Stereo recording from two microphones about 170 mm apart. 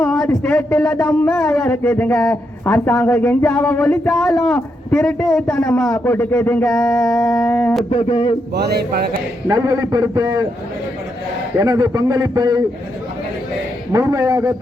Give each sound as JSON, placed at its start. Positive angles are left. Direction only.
{"t": 0.0, "sound": "speech", "side_deg": 5}
{"t": 7.9, "sound": "a sound", "side_deg": 35}
{"t": 8.5, "sound": "a man's voice", "side_deg": -65}
{"t": 9.5, "sound": "a man's voice", "side_deg": -20}
{"t": 11.6, "sound": "a man's voice", "side_deg": -20}
{"t": 13.9, "sound": "a man's voice", "side_deg": -20}